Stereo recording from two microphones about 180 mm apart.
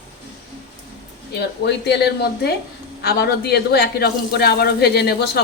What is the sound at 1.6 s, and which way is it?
Speech, 65° left (ahead or behind).